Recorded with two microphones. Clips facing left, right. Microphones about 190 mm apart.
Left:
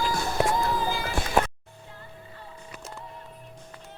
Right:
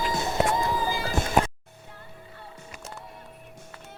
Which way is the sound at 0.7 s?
10° right (ahead or behind).